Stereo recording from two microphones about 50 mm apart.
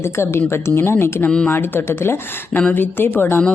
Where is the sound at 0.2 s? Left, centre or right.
Left.